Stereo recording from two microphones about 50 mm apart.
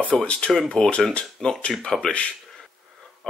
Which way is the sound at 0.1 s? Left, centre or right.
Centre.